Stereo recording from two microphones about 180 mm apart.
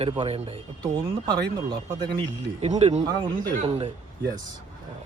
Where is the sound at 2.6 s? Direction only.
35° right (ahead or behind).